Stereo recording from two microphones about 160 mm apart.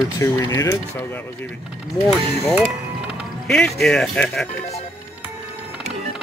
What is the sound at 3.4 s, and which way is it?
Speech, 5° left (ahead or behind).